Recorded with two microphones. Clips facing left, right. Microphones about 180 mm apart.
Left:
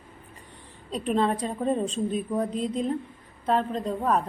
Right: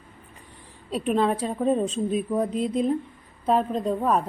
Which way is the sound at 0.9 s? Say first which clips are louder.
Right 2 dB; 5° right (ahead or behind).